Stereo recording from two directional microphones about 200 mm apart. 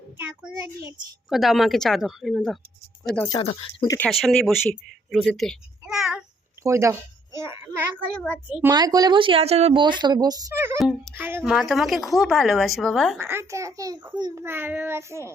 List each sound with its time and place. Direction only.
0.2 s a child's voice: 10° right (ahead or behind)
1.3 s a woman's voice: centre (ahead or behind)
3.3 s speech: 20° left (ahead or behind)
3.9 s speech: 5° left (ahead or behind)
6.6 s a child's voice: 15° right (ahead or behind)
8.7 s speech: 20° right (ahead or behind)
10.8 s a woman's voice: centre (ahead or behind)
11.1 s a woman's voice: 10° right (ahead or behind)
13.1 s a child's voice: 10° right (ahead or behind)